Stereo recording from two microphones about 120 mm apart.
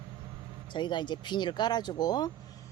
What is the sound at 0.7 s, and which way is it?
Speech, 40° left (ahead or behind).